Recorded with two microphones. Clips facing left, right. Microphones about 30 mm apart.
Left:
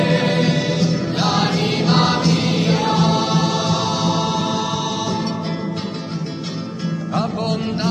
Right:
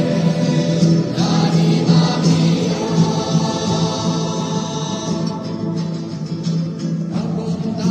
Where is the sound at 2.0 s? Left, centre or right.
Centre.